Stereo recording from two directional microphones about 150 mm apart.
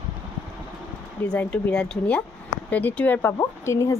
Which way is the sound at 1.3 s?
5° left (ahead or behind).